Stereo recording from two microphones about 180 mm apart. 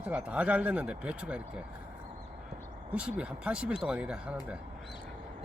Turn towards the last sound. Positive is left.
turn(degrees=-5)  # may be behind; listen again after turning